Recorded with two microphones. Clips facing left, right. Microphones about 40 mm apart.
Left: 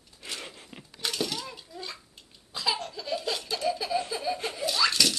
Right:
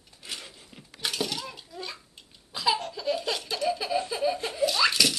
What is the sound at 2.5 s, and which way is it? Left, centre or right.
Laughter, centre.